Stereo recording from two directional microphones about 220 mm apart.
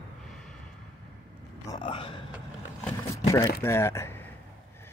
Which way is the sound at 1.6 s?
20° left (ahead or behind).